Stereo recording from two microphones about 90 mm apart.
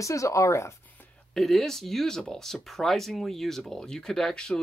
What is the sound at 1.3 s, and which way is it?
Speech, 5° left (ahead or behind).